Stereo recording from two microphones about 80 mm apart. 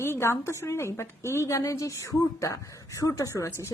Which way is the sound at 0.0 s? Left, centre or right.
Left.